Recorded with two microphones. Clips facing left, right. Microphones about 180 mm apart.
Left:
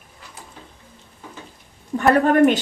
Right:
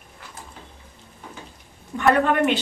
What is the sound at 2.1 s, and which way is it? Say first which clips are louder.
Speech: left 5 dB; 40° left (ahead or behind).